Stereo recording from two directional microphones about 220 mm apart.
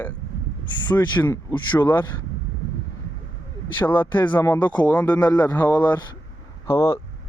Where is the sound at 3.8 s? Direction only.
10° left (ahead or behind).